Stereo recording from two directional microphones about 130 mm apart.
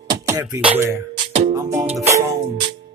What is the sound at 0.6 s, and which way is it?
Music, 10° right (ahead or behind).